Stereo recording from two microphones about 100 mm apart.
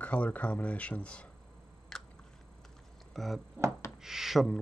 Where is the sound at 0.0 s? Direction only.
15° left (ahead or behind).